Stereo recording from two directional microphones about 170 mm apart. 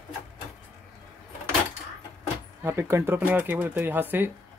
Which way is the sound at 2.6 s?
15° right (ahead or behind).